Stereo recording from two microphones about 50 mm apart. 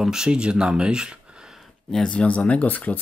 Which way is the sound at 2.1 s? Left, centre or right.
Left.